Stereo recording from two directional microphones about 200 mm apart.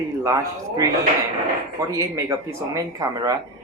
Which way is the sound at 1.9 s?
15° right (ahead or behind).